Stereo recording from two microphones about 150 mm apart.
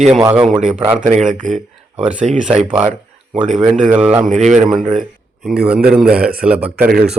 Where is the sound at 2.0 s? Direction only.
10° right (ahead or behind).